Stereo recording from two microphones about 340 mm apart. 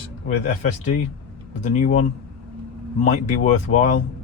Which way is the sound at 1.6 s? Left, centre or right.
Centre.